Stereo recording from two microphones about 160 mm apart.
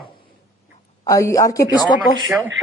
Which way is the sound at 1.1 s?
20° left (ahead or behind).